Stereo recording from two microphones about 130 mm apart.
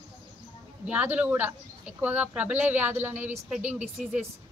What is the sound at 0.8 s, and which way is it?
A woman's voice, 10° right (ahead or behind).